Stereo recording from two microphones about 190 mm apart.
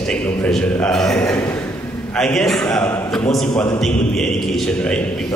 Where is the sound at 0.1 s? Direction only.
5° left (ahead or behind).